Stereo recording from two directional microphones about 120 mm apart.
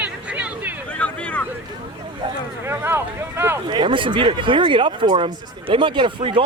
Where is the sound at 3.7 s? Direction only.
45° right (ahead or behind).